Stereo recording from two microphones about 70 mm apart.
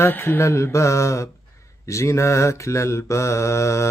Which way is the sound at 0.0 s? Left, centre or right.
Left.